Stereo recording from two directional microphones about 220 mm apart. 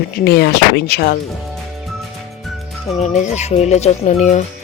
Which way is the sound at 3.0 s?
30° left (ahead or behind).